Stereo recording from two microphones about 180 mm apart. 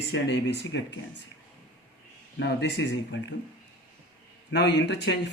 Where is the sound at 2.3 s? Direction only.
70° left (ahead or behind); by 3.4 s 90° left.